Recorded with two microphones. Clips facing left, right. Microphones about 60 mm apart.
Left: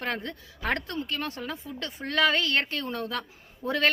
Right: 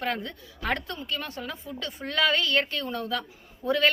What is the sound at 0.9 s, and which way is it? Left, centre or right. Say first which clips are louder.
Speech: left 2 dB; left.